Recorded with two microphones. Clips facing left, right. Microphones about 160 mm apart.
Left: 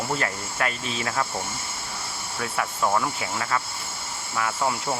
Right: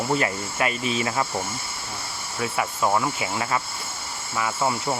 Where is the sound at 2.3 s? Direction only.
5° right (ahead or behind).